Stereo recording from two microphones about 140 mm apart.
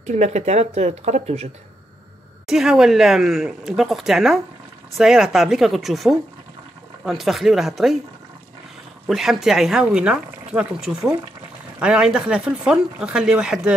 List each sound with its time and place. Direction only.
0.0 s speech: 55° right (ahead or behind)
2.4 s speech: 5° right (ahead or behind)
9.0 s speech: 5° right (ahead or behind)